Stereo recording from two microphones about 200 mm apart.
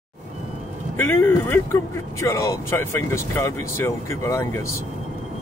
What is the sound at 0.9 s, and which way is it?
Speech, 10° left (ahead or behind).